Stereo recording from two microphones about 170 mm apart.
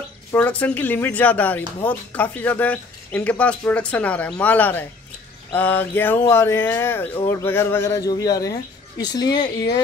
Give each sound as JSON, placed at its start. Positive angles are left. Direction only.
{"t": 0.3, "sound": "speech", "side_deg": 10}